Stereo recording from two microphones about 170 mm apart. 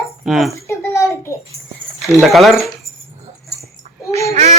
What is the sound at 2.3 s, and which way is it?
Speech, centre (ahead or behind).